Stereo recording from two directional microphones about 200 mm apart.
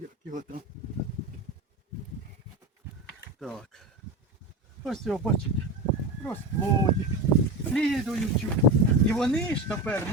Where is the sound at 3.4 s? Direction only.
Centre (ahead or behind).